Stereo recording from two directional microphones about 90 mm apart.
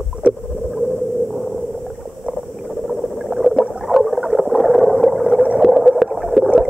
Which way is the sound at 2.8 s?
Centre (ahead or behind).